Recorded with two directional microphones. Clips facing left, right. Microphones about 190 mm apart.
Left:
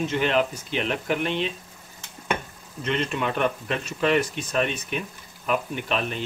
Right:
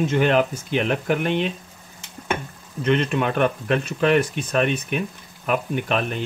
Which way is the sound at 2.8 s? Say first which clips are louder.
Right 5 dB; 55° right (ahead or behind).